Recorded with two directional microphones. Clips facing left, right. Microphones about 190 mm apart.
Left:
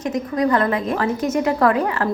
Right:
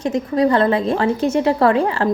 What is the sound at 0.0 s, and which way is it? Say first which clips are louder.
A woman's voice: right 3 dB; 30° right (ahead or behind).